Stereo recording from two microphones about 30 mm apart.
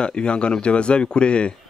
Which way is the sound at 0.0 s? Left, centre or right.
Left.